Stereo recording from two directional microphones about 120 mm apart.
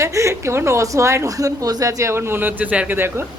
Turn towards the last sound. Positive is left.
turn(degrees=-20)  # may be behind; listen again after turning